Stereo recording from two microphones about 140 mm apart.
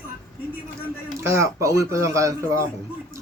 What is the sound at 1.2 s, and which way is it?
Speech, 20° right (ahead or behind).